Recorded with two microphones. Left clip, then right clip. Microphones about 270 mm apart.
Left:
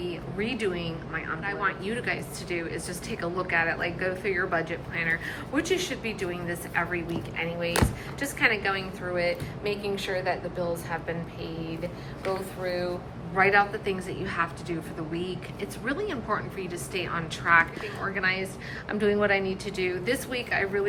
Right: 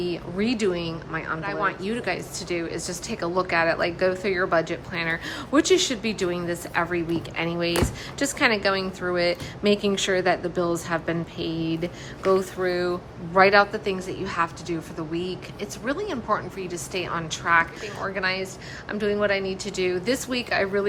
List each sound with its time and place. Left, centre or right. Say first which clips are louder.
0.0 s a woman's voice: right 5 dB; centre